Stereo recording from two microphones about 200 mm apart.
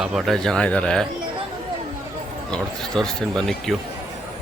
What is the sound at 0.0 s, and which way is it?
Speech, centre (ahead or behind).